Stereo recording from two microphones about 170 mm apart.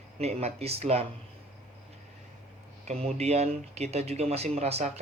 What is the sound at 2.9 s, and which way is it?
Speech, 40° right (ahead or behind).